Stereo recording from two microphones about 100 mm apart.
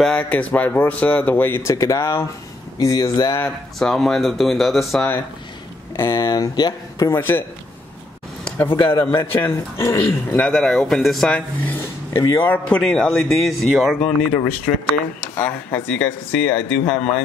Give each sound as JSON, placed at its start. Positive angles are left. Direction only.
{"t": 0.0, "sound": "a man's voice", "side_deg": 15}
{"t": 3.8, "sound": "speech", "side_deg": 0}
{"t": 5.9, "sound": "speech", "side_deg": 25}
{"t": 6.2, "sound": "speech", "side_deg": 45}
{"t": 7.1, "sound": "a man's voice", "side_deg": 20}
{"t": 8.6, "sound": "speech", "side_deg": 60}
{"t": 9.1, "sound": "a man's voice", "side_deg": 25}
{"t": 10.4, "sound": "speech", "side_deg": 5}
{"t": 12.1, "sound": "speech", "side_deg": 45}
{"t": 12.4, "sound": "speech", "side_deg": 10}
{"t": 15.3, "sound": "speech", "side_deg": 15}